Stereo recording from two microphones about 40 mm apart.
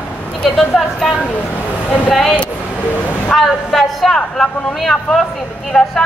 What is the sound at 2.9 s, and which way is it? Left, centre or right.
Speech, left.